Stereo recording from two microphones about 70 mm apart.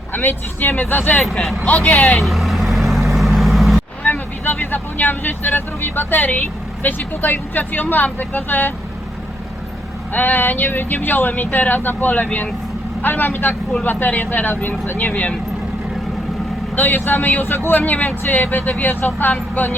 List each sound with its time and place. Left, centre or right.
0.1 s speech: left
1.2 s speech: centre
1.6 s speech: left
2.1 s vehicle: centre
4.0 s speech: left
10.1 s speech: left
16.7 s speech: left